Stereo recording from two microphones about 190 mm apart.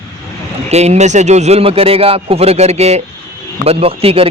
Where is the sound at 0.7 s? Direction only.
35° right (ahead or behind).